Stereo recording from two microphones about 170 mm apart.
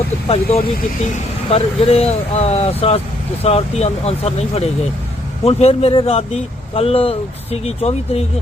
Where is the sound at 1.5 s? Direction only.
35° left (ahead or behind).